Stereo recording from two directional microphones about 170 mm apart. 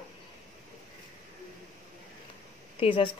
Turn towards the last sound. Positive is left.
turn(degrees=30)  # may be behind; listen again after turning